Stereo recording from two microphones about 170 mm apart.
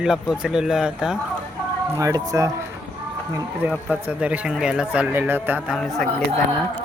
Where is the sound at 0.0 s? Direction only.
5° right (ahead or behind).